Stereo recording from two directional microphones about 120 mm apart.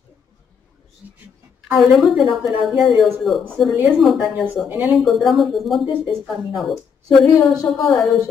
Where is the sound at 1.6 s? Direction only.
5° right (ahead or behind).